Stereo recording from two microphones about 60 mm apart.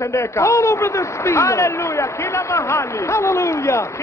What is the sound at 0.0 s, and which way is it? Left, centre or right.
A man's voice, left.